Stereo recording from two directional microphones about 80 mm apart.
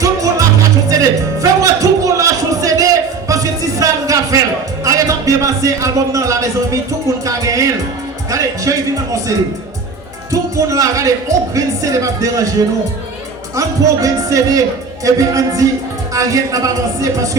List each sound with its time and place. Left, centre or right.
0.0 s music: right
3.2 s a sound: right
4.8 s a man's voice: right
10.3 s speech: right
13.6 s speech: right